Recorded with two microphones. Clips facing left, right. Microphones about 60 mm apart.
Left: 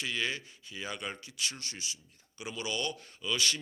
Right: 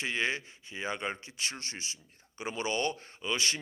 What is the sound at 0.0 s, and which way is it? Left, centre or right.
Speech, right.